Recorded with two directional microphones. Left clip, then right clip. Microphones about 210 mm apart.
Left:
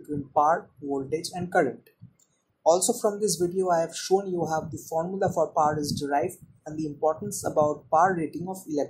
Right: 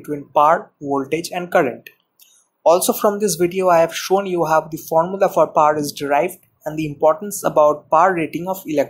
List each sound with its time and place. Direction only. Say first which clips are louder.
0.4 s speech: right 8 dB; 30° right (ahead or behind)